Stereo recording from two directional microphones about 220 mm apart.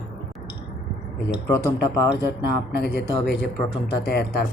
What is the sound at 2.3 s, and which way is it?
Speech, 50° left (ahead or behind).